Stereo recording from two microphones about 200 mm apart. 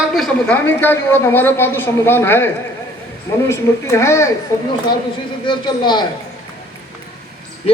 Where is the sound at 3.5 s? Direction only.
15° left (ahead or behind).